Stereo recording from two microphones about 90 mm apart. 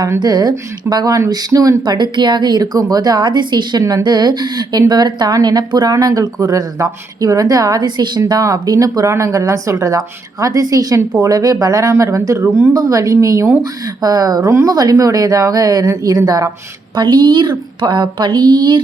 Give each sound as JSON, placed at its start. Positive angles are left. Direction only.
{"t": 0.2, "sound": "speech", "side_deg": -50}
{"t": 1.8, "sound": "speech", "side_deg": -55}
{"t": 8.3, "sound": "speech", "side_deg": -40}
{"t": 12.4, "sound": "speech", "side_deg": -25}
{"t": 12.7, "sound": "speech", "side_deg": -40}
{"t": 16.9, "sound": "speech", "side_deg": -55}